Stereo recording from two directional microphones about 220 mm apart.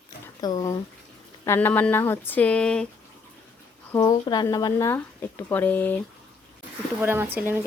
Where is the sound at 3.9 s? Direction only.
15° left (ahead or behind).